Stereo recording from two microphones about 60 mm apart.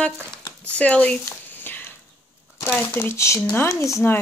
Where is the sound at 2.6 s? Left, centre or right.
Left.